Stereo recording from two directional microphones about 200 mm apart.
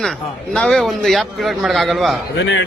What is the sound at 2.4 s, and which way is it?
Speech, 65° left (ahead or behind).